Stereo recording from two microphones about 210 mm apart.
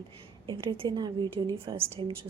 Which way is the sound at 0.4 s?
25° right (ahead or behind).